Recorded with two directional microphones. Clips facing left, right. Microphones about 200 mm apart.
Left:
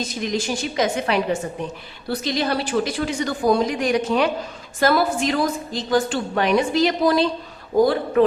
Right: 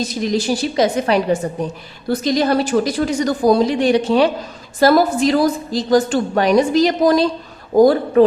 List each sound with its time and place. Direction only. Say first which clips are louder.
0.2 s a woman's voice: right 6 dB; 35° right (ahead or behind)